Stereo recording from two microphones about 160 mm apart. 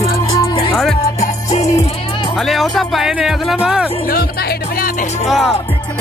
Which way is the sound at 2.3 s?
Centre (ahead or behind).